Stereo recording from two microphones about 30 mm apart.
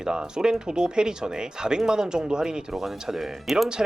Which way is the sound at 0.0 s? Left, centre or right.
Right.